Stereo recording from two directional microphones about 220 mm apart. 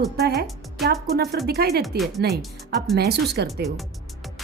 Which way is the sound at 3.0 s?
50° right (ahead or behind).